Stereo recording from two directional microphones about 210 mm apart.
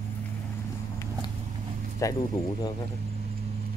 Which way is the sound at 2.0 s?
15° left (ahead or behind).